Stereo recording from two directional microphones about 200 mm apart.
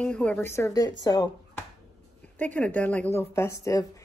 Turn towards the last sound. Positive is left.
turn(degrees=15)  # may be behind; listen again after turning